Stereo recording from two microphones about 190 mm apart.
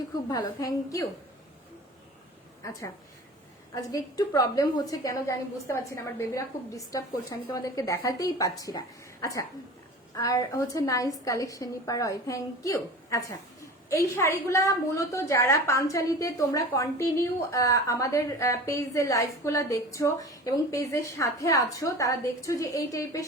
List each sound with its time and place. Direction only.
0.3 s a woman's voice: 20° left (ahead or behind)
3.8 s a woman's voice: 15° left (ahead or behind)